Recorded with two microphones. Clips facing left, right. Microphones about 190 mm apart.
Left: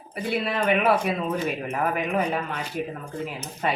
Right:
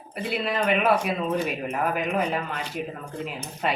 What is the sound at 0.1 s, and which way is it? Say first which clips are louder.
Speech: left 1 dB; centre (ahead or behind).